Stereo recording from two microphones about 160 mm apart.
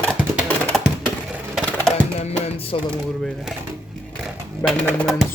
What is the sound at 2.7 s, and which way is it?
Speech, 35° left (ahead or behind).